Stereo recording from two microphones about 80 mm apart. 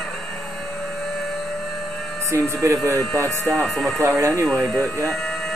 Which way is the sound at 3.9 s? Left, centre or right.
Right.